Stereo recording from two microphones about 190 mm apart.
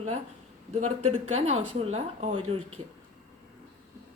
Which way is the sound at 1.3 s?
35° right (ahead or behind).